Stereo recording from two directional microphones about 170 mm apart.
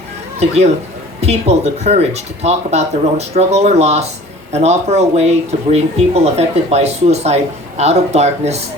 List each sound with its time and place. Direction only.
0.3 s speech: 40° right (ahead or behind)